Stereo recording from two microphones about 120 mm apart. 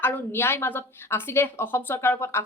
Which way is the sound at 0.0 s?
20° left (ahead or behind).